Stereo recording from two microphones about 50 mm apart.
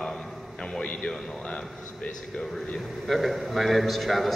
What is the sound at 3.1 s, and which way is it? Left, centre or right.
A man's voice, centre.